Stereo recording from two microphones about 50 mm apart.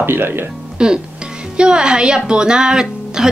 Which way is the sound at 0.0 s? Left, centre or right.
Right.